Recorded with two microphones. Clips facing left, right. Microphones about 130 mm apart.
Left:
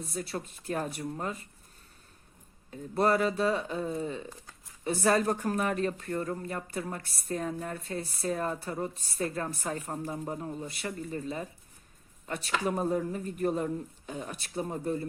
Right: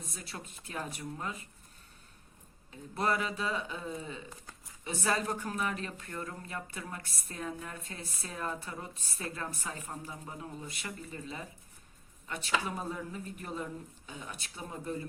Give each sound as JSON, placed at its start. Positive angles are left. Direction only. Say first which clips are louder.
{"t": 0.0, "sound": "speech", "louder": "left 9 dB", "side_deg": 40}
{"t": 2.6, "sound": "speech", "louder": "left 6 dB", "side_deg": 40}
{"t": 7.0, "sound": "a woman's voice", "louder": "even", "side_deg": -40}
{"t": 7.3, "sound": "speech", "louder": "left 7 dB", "side_deg": 40}
{"t": 12.6, "sound": "speech", "louder": "left 9 dB", "side_deg": 45}